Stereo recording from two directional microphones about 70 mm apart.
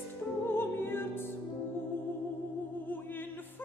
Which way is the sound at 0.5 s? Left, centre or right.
Left.